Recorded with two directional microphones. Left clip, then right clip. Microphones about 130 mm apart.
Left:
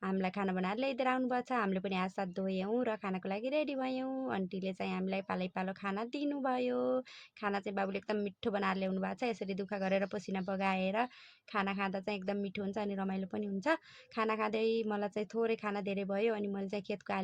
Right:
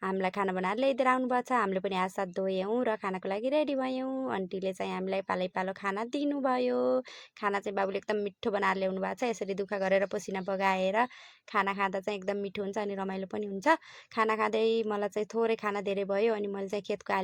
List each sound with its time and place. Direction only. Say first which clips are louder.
0.0 s a woman's voice: right 6 dB; 35° right (ahead or behind)